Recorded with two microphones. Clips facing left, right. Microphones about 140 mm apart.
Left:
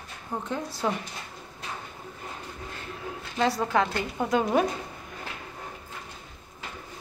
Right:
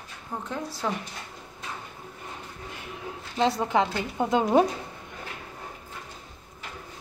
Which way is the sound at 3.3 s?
20° right (ahead or behind).